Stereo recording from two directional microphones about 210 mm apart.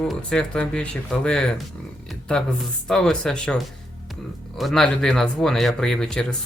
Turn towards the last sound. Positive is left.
turn(degrees=5)  # may be behind; listen again after turning